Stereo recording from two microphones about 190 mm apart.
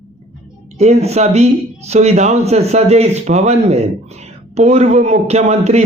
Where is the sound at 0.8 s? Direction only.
35° right (ahead or behind).